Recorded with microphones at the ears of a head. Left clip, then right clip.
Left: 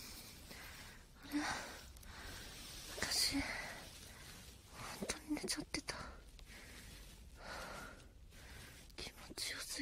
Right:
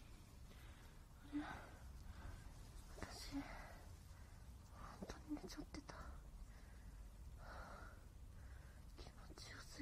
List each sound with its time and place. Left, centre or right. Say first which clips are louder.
0.0 s a sound: left 13 dB; left
7.4 s gasp: left 9 dB; left
8.9 s whispering: left 12 dB; left